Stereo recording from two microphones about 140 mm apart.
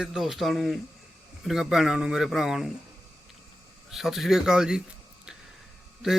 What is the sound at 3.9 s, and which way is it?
Speech, centre (ahead or behind).